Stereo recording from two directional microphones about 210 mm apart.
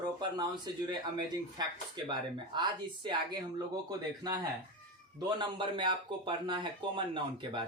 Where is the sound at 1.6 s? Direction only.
20° right (ahead or behind).